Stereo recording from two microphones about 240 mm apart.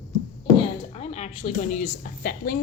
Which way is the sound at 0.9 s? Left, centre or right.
Left.